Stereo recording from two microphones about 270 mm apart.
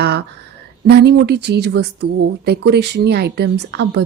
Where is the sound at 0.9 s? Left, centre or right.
Right.